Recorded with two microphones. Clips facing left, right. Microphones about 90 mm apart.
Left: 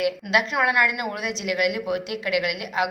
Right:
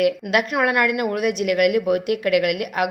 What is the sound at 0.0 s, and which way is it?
A woman's voice, 50° right (ahead or behind).